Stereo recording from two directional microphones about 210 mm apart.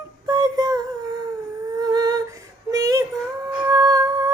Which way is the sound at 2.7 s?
15° right (ahead or behind).